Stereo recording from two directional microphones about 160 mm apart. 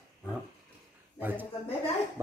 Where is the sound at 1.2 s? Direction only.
10° right (ahead or behind).